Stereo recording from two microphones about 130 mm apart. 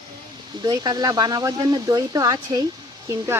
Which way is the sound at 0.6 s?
30° right (ahead or behind).